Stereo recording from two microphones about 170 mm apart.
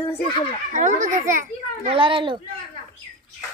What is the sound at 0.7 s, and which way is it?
Speech, 45° right (ahead or behind).